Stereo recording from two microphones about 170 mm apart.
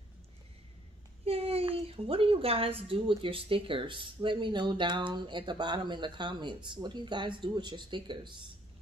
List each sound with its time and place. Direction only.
1.2 s a woman's voice: 35° right (ahead or behind)